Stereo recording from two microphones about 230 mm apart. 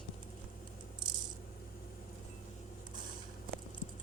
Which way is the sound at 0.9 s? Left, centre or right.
Centre.